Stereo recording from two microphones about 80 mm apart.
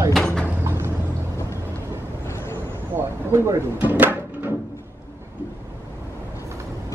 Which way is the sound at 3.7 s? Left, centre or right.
Centre.